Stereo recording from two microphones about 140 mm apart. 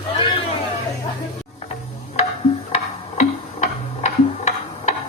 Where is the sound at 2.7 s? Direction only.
55° left (ahead or behind).